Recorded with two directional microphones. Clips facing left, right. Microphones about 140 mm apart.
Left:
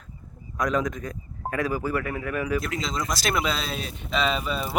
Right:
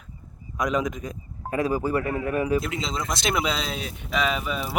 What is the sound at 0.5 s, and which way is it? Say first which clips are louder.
A man's voice: even; 20° right (ahead or behind).